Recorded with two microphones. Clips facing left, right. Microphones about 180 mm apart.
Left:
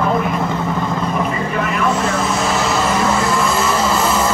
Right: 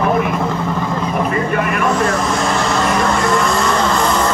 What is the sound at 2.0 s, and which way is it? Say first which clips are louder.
Vehicle: right 1 dB; 5° left (ahead or behind).